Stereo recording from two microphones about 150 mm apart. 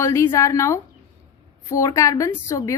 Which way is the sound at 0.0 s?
20° left (ahead or behind).